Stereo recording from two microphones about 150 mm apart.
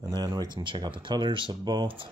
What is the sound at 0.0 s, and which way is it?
Speech, 25° right (ahead or behind).